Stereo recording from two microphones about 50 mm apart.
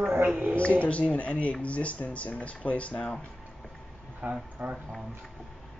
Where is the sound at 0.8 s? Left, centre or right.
Left.